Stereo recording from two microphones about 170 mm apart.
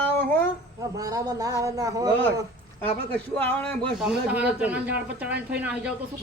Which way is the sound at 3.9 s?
5° right (ahead or behind).